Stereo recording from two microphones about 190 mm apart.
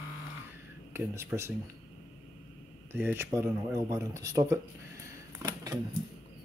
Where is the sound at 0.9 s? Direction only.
10° right (ahead or behind).